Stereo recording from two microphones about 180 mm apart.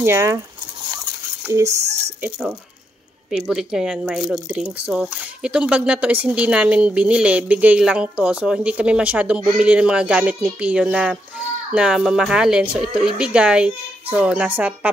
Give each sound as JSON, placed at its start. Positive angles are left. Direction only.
{"t": 0.0, "sound": "speech", "side_deg": -15}
{"t": 1.4, "sound": "speech", "side_deg": -15}